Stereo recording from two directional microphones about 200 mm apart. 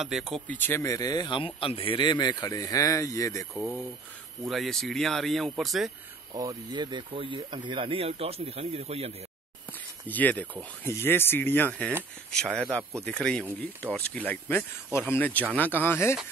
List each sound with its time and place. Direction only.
0.3 s speech: 10° left (ahead or behind)
3.5 s speech: centre (ahead or behind)
6.3 s speech: 20° right (ahead or behind)
10.0 s speech: 10° left (ahead or behind)